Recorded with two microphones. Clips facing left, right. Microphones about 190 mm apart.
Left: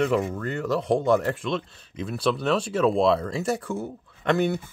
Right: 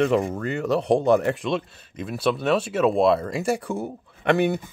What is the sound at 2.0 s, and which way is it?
Speech, 5° right (ahead or behind).